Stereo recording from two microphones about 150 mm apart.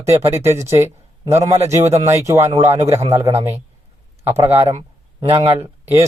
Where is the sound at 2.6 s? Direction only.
50° right (ahead or behind).